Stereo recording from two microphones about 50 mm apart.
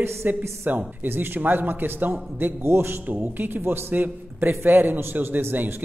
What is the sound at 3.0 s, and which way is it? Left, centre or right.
A man's voice, right.